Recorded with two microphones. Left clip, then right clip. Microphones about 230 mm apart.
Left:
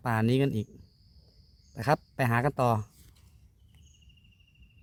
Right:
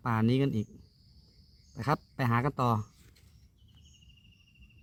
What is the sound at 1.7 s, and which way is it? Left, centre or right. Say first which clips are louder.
Speech: left 4 dB; left.